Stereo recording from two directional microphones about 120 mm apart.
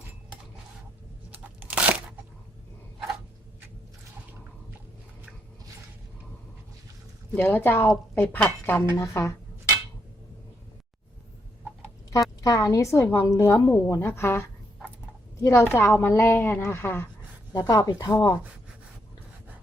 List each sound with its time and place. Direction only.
1.3 s crunch: 15° right (ahead or behind)
7.3 s a woman's voice: 15° left (ahead or behind)
12.1 s a woman's voice: 30° left (ahead or behind)
17.5 s speech: 30° left (ahead or behind)